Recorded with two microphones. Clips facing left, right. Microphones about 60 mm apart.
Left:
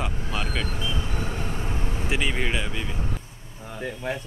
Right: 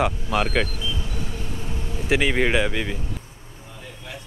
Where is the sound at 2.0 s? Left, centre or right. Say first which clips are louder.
Right 7 dB; right.